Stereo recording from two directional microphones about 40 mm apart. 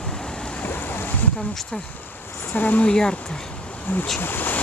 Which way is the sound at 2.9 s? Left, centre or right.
Centre.